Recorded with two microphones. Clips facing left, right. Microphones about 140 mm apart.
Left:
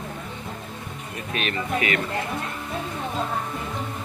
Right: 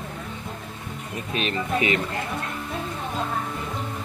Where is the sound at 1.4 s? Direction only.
30° right (ahead or behind).